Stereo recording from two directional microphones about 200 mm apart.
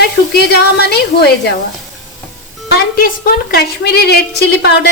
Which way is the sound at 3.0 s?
45° left (ahead or behind).